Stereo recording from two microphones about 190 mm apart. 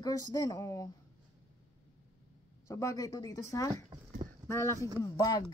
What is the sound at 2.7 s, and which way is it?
Speech, 15° left (ahead or behind).